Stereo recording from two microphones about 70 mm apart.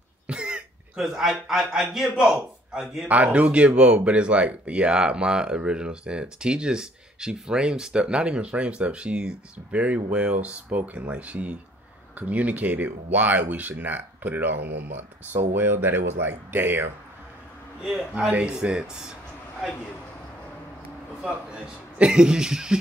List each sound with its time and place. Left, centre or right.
0.3 s cough: centre
1.5 s a man's voice: centre
3.1 s speech: centre
18.3 s a man's voice: centre
21.3 s speech: centre